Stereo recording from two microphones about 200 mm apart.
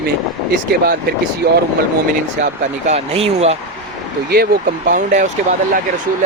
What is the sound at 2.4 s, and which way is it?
Speech, 35° right (ahead or behind).